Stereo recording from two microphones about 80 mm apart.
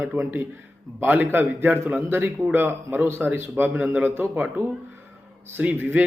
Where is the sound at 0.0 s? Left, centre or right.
Right.